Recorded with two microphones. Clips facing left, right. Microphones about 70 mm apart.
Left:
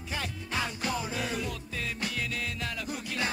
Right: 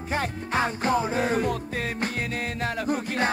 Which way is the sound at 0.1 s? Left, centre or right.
Right.